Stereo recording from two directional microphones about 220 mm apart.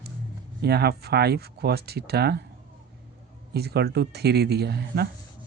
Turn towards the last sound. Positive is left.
turn(degrees=-50)  # may be behind; listen again after turning